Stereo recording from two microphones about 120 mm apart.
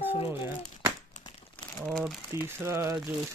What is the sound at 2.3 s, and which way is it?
Speech, 20° right (ahead or behind).